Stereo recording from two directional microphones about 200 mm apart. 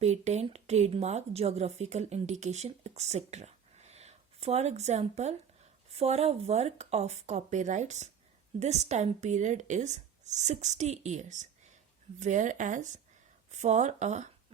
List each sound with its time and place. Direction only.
0.0 s speech: 35° right (ahead or behind)